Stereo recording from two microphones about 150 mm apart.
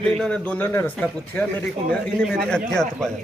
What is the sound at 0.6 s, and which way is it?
Speech, 15° left (ahead or behind).